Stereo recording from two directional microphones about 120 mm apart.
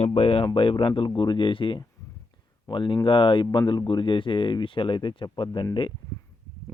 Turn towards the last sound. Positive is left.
turn(degrees=40)  # may be behind; listen again after turning